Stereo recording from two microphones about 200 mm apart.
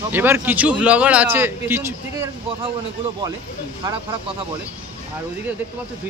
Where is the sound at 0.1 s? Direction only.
10° right (ahead or behind).